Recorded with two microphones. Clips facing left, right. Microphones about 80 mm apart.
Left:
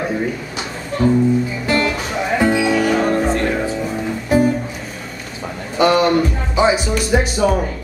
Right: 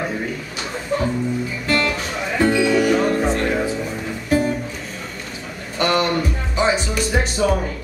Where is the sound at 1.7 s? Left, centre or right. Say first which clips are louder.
Left 1 dB; centre.